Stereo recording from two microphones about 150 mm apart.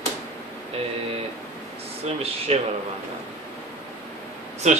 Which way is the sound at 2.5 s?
45° right (ahead or behind).